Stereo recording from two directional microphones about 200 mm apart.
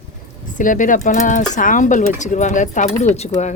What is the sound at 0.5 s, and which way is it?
Speech, 40° left (ahead or behind).